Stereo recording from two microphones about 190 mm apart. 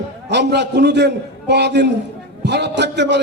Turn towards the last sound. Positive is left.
turn(degrees=-65)  # may be behind; listen again after turning